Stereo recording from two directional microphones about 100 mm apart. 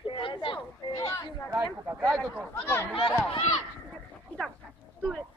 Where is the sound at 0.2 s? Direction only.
60° left (ahead or behind).